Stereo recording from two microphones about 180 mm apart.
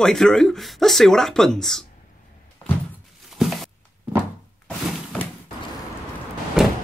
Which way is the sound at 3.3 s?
Centre (ahead or behind).